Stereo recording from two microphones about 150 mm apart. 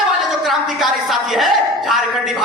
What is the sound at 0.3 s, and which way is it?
A woman's voice, centre (ahead or behind).